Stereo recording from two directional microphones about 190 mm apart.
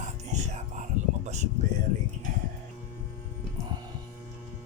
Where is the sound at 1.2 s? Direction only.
35° right (ahead or behind).